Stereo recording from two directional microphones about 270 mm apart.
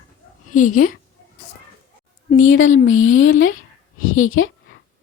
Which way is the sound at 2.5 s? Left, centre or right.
Left.